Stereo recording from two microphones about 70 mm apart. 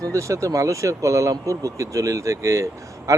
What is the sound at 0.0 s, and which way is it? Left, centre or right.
Speech, right.